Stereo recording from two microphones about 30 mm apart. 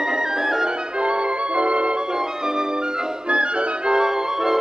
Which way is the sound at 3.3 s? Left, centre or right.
Right.